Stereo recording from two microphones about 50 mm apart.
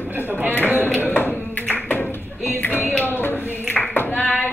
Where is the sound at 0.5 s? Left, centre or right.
Left.